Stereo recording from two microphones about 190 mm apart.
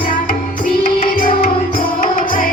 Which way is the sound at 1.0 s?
45° left (ahead or behind).